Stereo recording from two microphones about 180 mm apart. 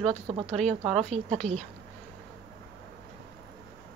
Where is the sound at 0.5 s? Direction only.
5° left (ahead or behind).